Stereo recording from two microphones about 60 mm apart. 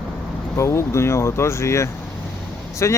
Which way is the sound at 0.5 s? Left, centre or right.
Left.